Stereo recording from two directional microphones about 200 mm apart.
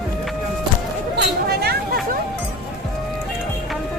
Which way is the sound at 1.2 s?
55° right (ahead or behind).